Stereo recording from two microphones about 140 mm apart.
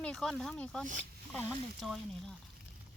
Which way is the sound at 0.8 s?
65° right (ahead or behind).